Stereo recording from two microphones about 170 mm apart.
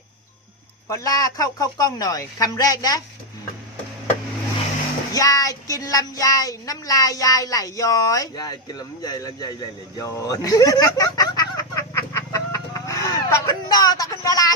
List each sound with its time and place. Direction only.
0.9 s speech: 20° left (ahead or behind)
5.1 s speech: 20° left (ahead or behind)